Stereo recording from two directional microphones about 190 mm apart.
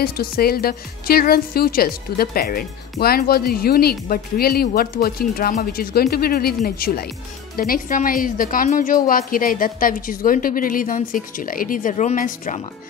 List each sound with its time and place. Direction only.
0.0 s a woman's voice: 55° left (ahead or behind)